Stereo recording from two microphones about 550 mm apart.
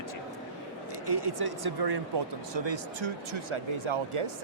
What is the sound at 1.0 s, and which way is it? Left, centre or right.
Speech, right.